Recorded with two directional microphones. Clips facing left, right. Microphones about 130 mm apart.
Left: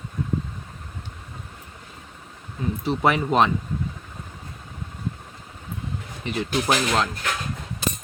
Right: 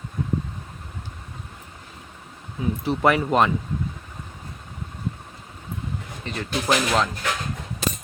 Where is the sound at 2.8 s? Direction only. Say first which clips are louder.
Right 1 dB; centre (ahead or behind).